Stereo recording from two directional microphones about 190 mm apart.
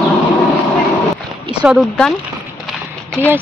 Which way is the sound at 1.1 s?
5° right (ahead or behind).